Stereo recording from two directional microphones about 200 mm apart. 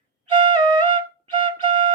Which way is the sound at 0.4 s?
20° right (ahead or behind).